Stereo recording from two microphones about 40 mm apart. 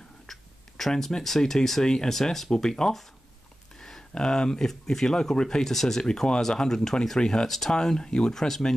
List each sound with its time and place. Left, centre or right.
0.3 s a sound: centre
1.2 s speech: centre
4.1 s speech: centre
5.7 s speech: centre
6.0 s speech: centre
7.4 s speech: centre